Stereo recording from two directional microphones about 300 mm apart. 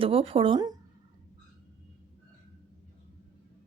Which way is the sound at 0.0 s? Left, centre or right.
Centre.